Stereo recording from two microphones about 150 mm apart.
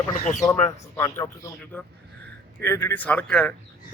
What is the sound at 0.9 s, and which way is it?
Speech, 20° left (ahead or behind).